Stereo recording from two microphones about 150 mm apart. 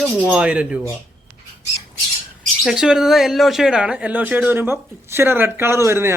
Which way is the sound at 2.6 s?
5° right (ahead or behind).